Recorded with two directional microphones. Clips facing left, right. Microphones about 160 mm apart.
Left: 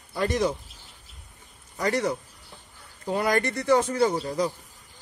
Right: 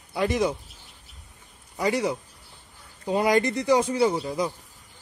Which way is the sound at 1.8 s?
10° right (ahead or behind).